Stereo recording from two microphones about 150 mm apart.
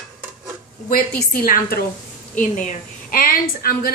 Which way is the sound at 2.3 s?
60° left (ahead or behind).